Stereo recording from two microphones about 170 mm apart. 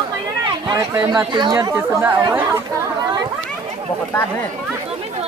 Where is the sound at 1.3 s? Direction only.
25° right (ahead or behind).